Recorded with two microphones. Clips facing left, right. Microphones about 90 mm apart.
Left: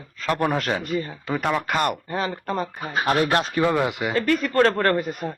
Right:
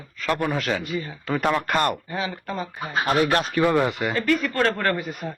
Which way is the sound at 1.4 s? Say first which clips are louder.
Right 1 dB; centre (ahead or behind).